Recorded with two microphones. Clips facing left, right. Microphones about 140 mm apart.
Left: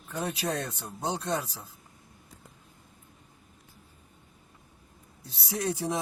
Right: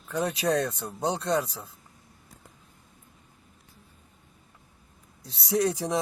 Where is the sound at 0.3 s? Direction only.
75° right (ahead or behind).